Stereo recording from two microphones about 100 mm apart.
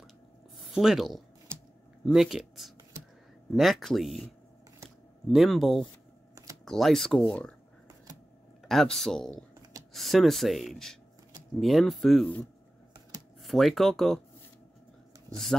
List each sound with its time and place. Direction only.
0.7 s speech: centre (ahead or behind)
5.3 s speech: centre (ahead or behind)
8.6 s speech: centre (ahead or behind)
9.3 s computer keyboard: 35° right (ahead or behind)
9.9 s speech: centre (ahead or behind)
13.4 s speech: centre (ahead or behind)